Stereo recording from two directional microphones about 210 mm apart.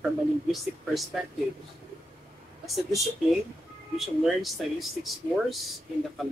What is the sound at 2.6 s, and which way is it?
Speech, centre (ahead or behind).